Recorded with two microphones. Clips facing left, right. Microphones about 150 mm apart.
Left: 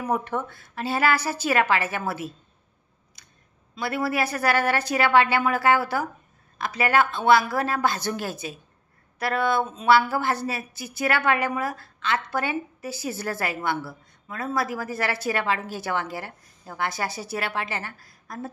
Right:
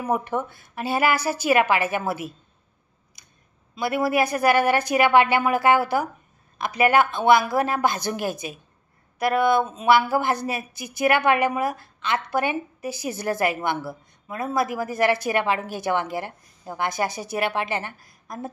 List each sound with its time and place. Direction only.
0.0 s speech: 10° right (ahead or behind)
3.2 s scissors: 15° right (ahead or behind)
3.7 s speech: 15° right (ahead or behind)